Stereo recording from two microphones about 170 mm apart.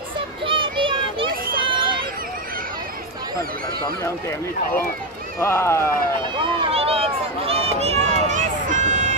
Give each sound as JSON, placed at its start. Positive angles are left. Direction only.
{"t": 0.5, "sound": "children playing", "side_deg": -30}
{"t": 1.6, "sound": "a sound", "side_deg": -30}
{"t": 5.4, "sound": "speech", "side_deg": 15}
{"t": 6.4, "sound": "speech", "side_deg": -30}
{"t": 7.4, "sound": "run", "side_deg": -35}